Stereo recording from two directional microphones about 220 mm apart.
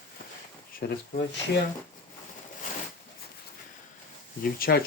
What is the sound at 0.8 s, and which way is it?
Speech, 45° left (ahead or behind).